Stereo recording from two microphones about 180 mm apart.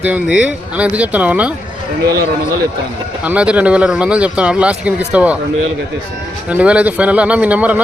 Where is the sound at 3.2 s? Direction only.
5° right (ahead or behind).